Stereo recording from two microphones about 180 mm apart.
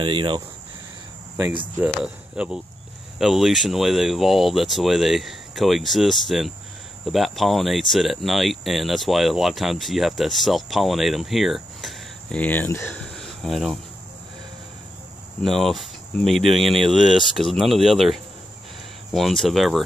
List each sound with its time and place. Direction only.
0.0 s speech: 30° right (ahead or behind)
2.3 s speech: 5° right (ahead or behind)
15.4 s speech: centre (ahead or behind)